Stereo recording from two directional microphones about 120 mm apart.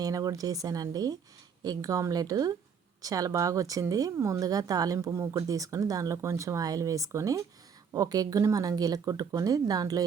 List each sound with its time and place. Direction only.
0.0 s speech: 30° right (ahead or behind)